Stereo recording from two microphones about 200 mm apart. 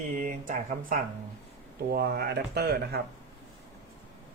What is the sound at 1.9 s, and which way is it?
Speech, 55° right (ahead or behind).